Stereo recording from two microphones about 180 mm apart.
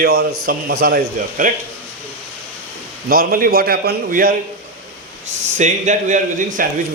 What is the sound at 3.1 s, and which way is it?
Speech, 55° right (ahead or behind).